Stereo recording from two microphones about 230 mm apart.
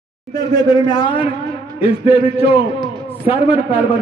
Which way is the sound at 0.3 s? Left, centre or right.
Centre.